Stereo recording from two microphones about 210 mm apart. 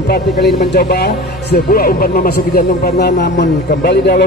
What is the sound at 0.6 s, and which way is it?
Speech, 50° left (ahead or behind).